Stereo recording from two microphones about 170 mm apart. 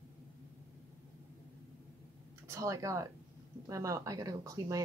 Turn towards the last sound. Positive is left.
turn(degrees=-20)  # may be behind; listen again after turning